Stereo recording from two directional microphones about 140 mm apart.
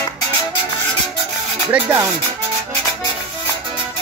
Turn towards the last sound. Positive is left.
turn(degrees=-15)  # may be behind; listen again after turning